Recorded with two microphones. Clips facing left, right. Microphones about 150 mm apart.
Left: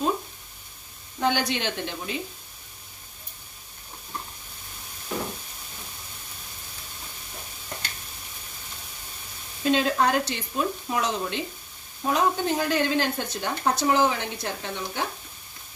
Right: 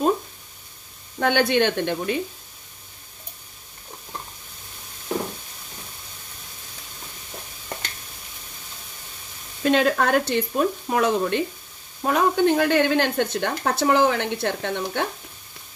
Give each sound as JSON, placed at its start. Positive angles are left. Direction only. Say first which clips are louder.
{"t": 1.2, "sound": "speech", "louder": "right 6 dB", "side_deg": -60}
{"t": 9.6, "sound": "speech", "louder": "right 3 dB", "side_deg": -60}